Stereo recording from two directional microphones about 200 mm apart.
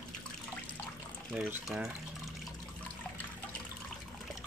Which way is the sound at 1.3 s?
5° right (ahead or behind).